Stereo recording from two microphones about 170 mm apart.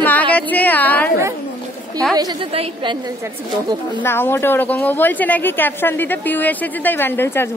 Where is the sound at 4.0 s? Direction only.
15° left (ahead or behind).